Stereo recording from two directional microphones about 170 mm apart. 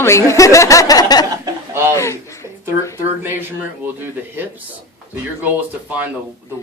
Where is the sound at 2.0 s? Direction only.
15° left (ahead or behind).